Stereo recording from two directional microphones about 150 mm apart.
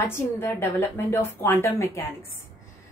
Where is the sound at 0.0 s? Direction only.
15° left (ahead or behind).